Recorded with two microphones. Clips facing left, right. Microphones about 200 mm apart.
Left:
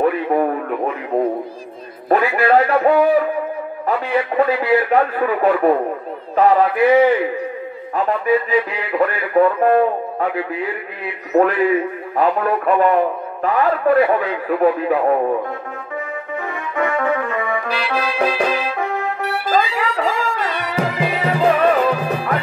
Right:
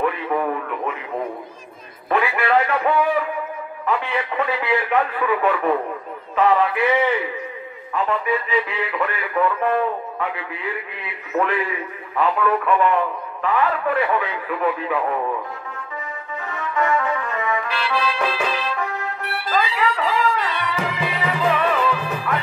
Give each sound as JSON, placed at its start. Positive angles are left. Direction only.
{"t": 0.0, "sound": "radio", "side_deg": 40}
{"t": 2.0, "sound": "a man's voice", "side_deg": 40}
{"t": 16.7, "sound": "trumpet", "side_deg": 55}
{"t": 17.7, "sound": "music", "side_deg": 45}